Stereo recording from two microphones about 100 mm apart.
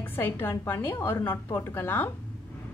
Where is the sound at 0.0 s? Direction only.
20° left (ahead or behind).